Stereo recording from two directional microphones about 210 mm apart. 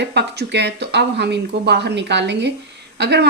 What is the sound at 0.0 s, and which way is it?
Speech, 55° right (ahead or behind).